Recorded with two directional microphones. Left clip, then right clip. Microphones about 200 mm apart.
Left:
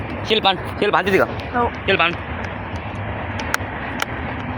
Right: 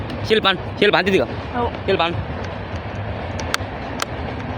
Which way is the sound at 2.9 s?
10° right (ahead or behind).